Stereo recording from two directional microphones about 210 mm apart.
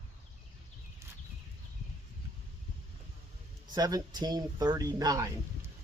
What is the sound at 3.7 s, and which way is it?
Speech, 20° right (ahead or behind).